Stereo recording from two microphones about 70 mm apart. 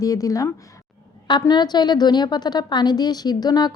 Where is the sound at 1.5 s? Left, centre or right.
Left.